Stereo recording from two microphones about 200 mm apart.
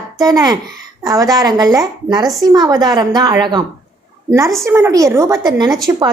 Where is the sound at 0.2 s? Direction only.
20° right (ahead or behind).